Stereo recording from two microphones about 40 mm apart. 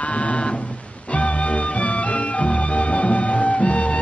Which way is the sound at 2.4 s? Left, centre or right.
Left.